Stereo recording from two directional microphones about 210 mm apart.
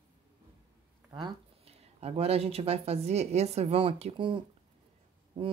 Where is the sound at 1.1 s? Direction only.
25° right (ahead or behind).